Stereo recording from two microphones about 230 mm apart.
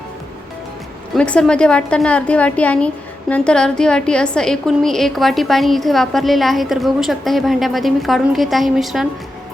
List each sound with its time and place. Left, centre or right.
1.1 s a woman's voice: centre